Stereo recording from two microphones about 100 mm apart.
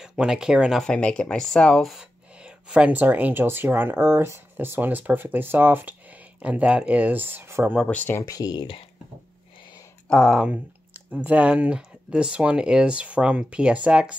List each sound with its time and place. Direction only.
0.0 s speech: 10° right (ahead or behind)
0.8 s speech: 10° left (ahead or behind); by 7.7 s 25° right (ahead or behind)
7.9 s speech: 15° left (ahead or behind)
8.2 s speech: 40° left (ahead or behind)
10.0 s speech: 5° left (ahead or behind)
10.4 s speech: 15° right (ahead or behind)